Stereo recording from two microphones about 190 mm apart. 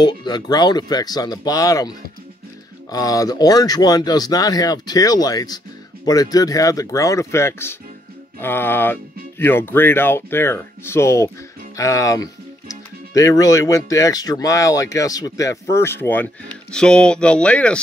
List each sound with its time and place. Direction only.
0.0 s speech: 20° left (ahead or behind); by 17.7 s 5° left (ahead or behind)